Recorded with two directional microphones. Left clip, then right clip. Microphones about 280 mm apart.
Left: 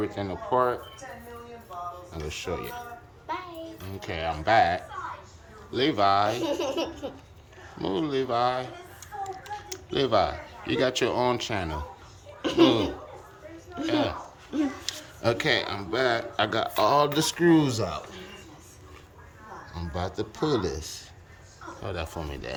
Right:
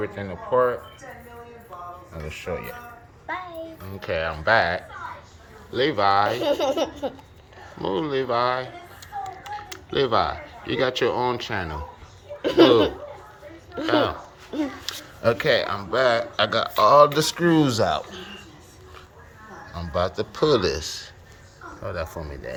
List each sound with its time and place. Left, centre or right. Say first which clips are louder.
0.0 s speech: right 1 dB; centre
4.0 s speech: right 4 dB; centre
6.4 s speech: right 6 dB; centre
7.8 s speech: right 3 dB; centre
14.5 s a sound: right 1 dB; centre
15.2 s speech: right 5 dB; centre
19.7 s speech: right 8 dB; centre
21.8 s speech: right 4 dB; centre